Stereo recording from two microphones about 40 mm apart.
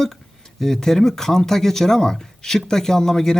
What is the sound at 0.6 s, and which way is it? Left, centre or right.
Speech, centre.